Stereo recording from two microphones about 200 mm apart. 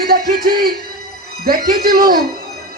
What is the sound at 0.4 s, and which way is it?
Music, 50° right (ahead or behind).